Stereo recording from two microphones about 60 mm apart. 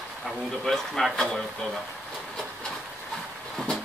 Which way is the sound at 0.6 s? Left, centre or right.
Centre.